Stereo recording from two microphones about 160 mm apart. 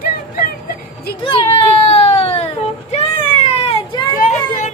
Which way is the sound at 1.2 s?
35° left (ahead or behind).